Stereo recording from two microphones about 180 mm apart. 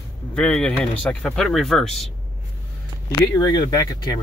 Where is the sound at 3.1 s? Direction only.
15° left (ahead or behind).